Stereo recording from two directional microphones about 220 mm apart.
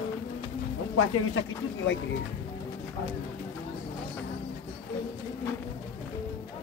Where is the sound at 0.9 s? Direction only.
75° left (ahead or behind).